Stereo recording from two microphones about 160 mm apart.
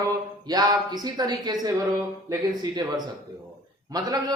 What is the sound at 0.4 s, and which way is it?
A woman's voice, 25° right (ahead or behind).